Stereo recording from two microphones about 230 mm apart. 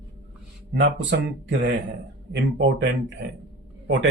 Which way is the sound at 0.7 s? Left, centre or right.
Right.